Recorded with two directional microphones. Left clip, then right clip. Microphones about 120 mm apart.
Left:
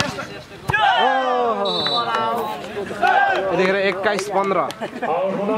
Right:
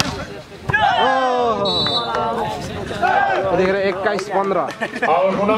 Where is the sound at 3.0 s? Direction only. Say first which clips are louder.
Even; 15° left (ahead or behind).